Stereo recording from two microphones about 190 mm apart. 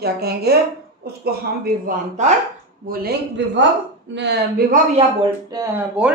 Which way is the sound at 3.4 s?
70° right (ahead or behind).